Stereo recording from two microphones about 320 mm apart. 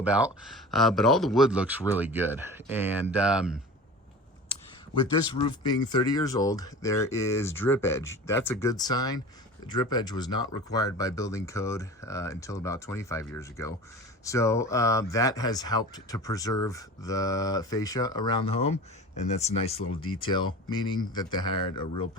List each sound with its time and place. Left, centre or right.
0.0 s speech: centre
5.2 s speech: centre
19.8 s speech: left
20.2 s speech: centre